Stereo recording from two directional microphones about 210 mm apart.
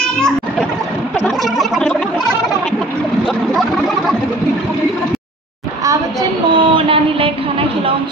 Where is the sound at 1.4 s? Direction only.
Centre (ahead or behind).